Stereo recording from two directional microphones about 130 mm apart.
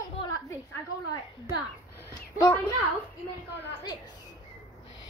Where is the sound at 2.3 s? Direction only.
25° left (ahead or behind).